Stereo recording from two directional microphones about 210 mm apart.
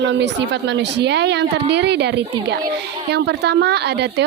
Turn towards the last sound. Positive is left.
turn(degrees=-55)  # may be behind; listen again after turning